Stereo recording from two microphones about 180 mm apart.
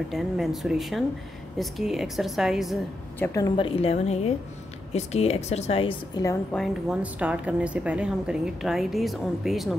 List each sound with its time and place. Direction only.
0.1 s a woman's voice: centre (ahead or behind)
3.2 s a woman's voice: 15° left (ahead or behind)
6.5 s a woman's voice: centre (ahead or behind)